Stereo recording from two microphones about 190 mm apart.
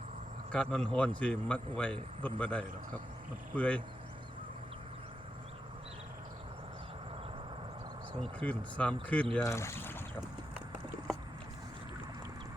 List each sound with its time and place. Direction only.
0.5 s a man's voice: 5° left (ahead or behind)
8.2 s speech: 5° left (ahead or behind)